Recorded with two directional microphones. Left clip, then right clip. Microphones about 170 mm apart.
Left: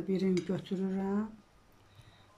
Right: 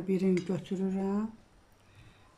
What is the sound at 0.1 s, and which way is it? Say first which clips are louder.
Speech: right 3 dB; 5° right (ahead or behind).